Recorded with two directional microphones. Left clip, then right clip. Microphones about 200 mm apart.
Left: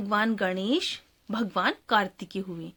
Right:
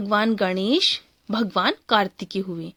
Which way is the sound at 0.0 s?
30° right (ahead or behind).